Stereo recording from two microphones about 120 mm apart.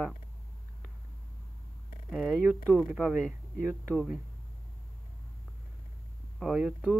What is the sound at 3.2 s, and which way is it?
Speech, 5° left (ahead or behind).